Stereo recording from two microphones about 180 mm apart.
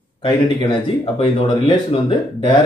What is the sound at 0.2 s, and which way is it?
Speech, 30° left (ahead or behind).